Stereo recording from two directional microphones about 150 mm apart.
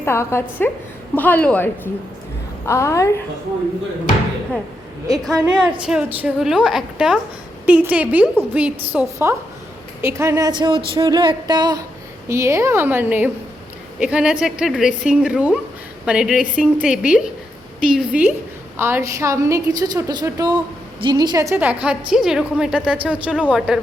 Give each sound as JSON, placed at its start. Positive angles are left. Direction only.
{"t": 0.0, "sound": "a woman's voice", "side_deg": 15}
{"t": 5.2, "sound": "a woman's voice", "side_deg": -5}
{"t": 21.6, "sound": "a woman's voice", "side_deg": -10}